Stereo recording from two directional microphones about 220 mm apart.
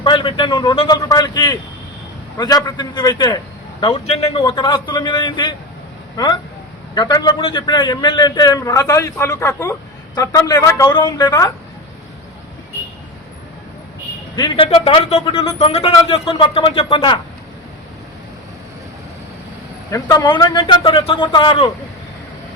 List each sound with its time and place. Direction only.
0.0 s a man's voice: 20° left (ahead or behind)
6.9 s a man's voice: 20° left (ahead or behind)
14.3 s a man's voice: 20° left (ahead or behind)
19.9 s a man's voice: 15° left (ahead or behind)